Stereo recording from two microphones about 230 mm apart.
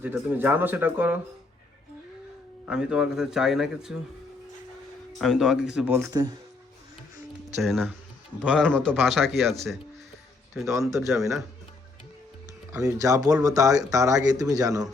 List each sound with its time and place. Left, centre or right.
0.0 s speech: centre
2.6 s speech: centre
5.2 s speech: centre
7.6 s speech: centre
10.7 s speech: centre
12.7 s speech: centre